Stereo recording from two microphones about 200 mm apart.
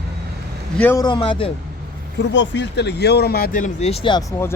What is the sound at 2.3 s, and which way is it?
Speech, 65° left (ahead or behind).